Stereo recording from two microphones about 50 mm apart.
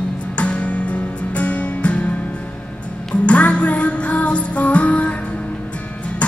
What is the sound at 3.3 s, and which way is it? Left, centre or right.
Music, left.